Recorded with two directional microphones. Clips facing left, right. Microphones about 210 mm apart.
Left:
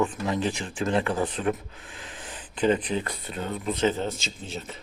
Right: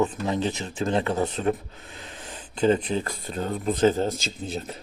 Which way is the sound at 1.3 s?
40° right (ahead or behind).